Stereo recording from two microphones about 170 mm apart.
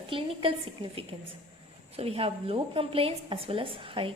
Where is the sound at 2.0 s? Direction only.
35° right (ahead or behind).